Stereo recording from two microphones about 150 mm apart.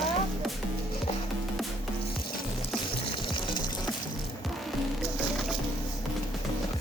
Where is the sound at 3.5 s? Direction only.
30° left (ahead or behind).